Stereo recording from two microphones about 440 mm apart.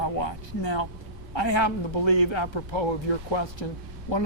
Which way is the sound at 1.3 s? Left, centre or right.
Left.